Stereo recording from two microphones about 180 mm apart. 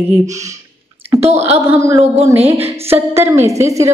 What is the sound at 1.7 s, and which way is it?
A woman's voice, 15° right (ahead or behind).